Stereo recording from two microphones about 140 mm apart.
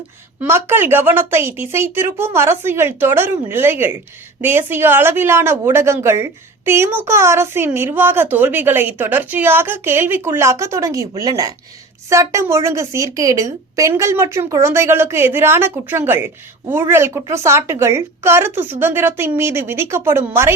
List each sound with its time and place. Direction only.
0.3 s a woman's voice: 15° right (ahead or behind)